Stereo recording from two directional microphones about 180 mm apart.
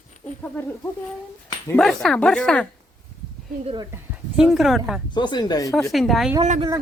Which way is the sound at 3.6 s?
25° right (ahead or behind).